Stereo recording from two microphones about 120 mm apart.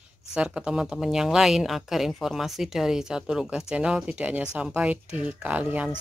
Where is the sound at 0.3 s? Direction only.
5° right (ahead or behind).